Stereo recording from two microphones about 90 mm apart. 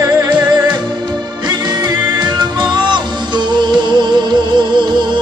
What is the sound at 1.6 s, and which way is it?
Music, 50° right (ahead or behind).